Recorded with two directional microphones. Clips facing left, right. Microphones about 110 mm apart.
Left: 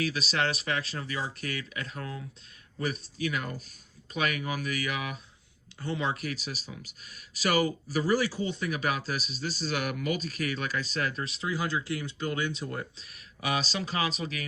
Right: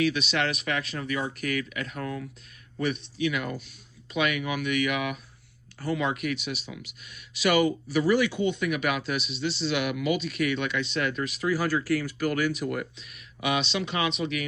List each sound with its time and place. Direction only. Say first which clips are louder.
0.0 s speech: right 4 dB; 35° left (ahead or behind)